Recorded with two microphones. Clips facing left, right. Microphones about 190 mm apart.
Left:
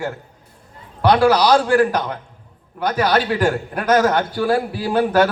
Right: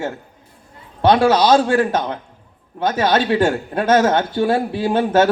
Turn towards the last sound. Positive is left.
turn(degrees=-25)  # may be behind; listen again after turning